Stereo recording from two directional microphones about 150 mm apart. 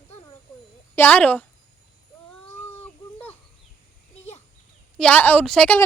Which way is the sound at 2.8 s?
10° left (ahead or behind).